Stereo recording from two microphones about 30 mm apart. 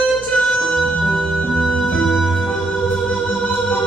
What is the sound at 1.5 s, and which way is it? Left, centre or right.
Music, centre.